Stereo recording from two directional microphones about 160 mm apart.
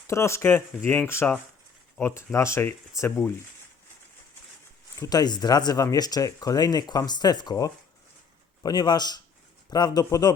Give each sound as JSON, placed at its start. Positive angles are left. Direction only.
{"t": 0.1, "sound": "speech", "side_deg": 15}
{"t": 4.9, "sound": "speech", "side_deg": 25}